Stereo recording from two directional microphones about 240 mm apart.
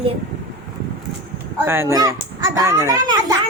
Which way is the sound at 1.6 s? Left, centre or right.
Centre.